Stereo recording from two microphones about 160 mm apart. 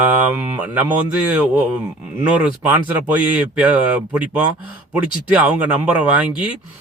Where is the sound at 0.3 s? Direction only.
10° right (ahead or behind).